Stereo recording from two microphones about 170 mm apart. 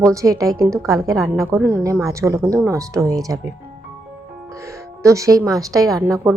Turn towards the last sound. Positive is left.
turn(degrees=-15)  # may be behind; listen again after turning